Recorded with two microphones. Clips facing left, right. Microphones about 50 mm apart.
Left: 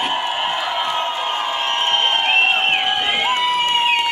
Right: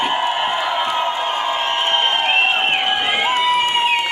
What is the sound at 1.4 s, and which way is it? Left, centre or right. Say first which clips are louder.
Crowd: right 1 dB; centre.